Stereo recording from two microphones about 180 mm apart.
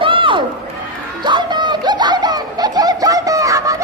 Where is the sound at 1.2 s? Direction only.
25° right (ahead or behind).